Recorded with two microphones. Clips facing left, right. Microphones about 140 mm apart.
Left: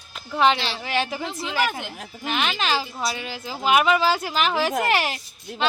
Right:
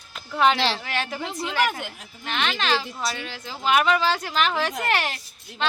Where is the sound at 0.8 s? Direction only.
5° left (ahead or behind).